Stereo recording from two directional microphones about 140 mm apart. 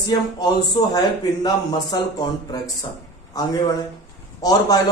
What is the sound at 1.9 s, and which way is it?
Speech, 30° left (ahead or behind).